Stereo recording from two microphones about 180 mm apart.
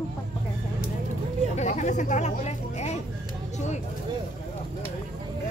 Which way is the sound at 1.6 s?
40° left (ahead or behind).